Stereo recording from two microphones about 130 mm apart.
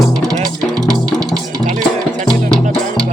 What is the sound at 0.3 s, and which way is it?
Music, 30° right (ahead or behind).